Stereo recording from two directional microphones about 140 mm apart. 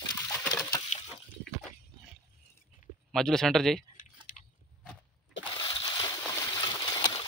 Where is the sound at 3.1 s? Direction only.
Centre (ahead or behind).